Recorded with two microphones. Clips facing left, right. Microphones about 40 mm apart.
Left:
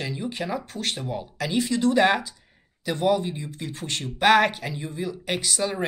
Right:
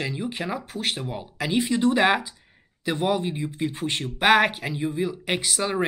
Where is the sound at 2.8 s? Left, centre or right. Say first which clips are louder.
Left 1 dB; right.